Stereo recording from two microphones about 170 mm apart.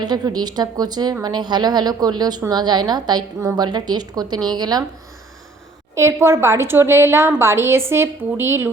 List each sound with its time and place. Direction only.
0.0 s a woman's voice: 25° right (ahead or behind)
5.9 s a woman's voice: 15° right (ahead or behind)